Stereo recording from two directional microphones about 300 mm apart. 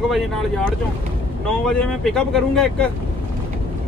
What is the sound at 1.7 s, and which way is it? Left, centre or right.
Speech, centre.